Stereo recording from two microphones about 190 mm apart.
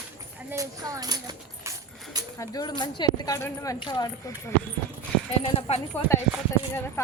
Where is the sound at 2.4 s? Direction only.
20° left (ahead or behind).